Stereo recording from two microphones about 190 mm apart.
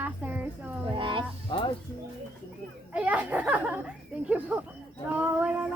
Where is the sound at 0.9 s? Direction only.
25° right (ahead or behind).